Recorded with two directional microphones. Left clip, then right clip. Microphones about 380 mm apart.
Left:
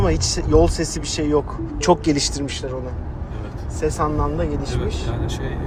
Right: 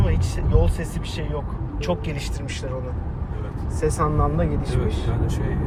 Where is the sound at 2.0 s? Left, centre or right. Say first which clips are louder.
Left 11 dB; centre.